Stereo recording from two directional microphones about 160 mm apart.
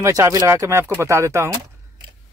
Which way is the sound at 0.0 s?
20° right (ahead or behind).